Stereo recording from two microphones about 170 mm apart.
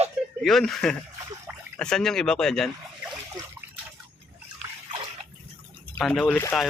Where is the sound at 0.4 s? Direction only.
Centre (ahead or behind).